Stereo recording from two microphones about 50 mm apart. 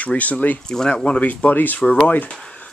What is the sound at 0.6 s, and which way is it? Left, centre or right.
Speech, centre.